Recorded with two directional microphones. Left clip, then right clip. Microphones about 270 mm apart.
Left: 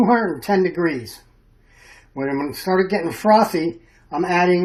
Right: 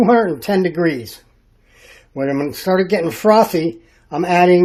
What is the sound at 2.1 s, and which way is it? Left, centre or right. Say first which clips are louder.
Speech: right 4 dB; right.